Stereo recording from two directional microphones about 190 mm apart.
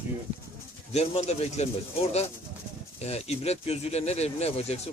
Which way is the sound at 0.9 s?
35° left (ahead or behind).